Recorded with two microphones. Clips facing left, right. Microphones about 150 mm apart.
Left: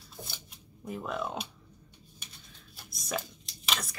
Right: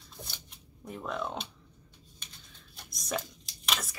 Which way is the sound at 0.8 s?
5° left (ahead or behind).